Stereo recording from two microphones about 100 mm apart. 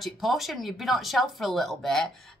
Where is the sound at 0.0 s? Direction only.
Centre (ahead or behind).